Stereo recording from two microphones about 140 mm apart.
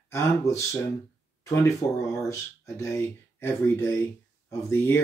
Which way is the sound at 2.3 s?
20° left (ahead or behind).